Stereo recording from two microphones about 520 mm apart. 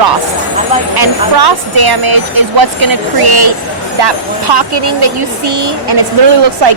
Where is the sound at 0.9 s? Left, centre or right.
Right.